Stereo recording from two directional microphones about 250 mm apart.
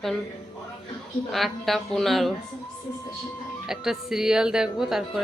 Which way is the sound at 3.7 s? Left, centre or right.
Centre.